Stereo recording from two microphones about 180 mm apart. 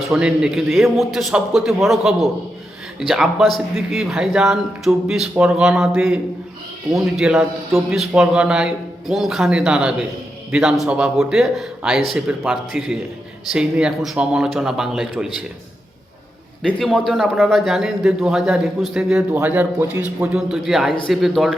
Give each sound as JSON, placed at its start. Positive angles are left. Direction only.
{"t": 0.1, "sound": "a man's voice", "side_deg": -5}
{"t": 16.6, "sound": "a man's voice", "side_deg": 5}